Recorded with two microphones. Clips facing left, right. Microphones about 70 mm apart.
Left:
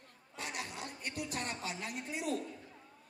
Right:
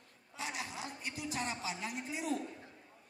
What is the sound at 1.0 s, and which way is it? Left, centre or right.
Speech, left.